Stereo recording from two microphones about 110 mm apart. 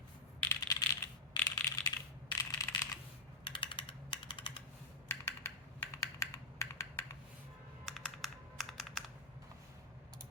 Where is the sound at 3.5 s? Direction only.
50° left (ahead or behind).